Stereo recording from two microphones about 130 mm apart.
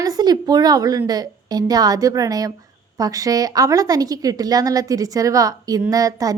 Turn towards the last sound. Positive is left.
turn(degrees=-25)  # may be behind; listen again after turning